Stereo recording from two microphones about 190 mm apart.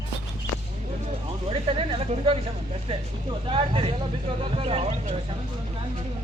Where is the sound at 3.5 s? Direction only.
30° right (ahead or behind).